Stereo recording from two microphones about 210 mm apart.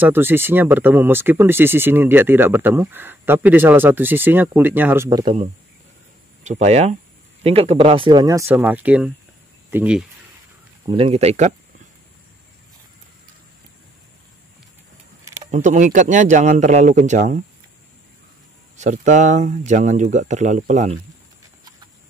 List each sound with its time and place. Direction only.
0.0 s speech: 10° right (ahead or behind)
10.9 s speech: 30° right (ahead or behind)
15.5 s speech: 35° right (ahead or behind)
18.8 s speech: 35° right (ahead or behind)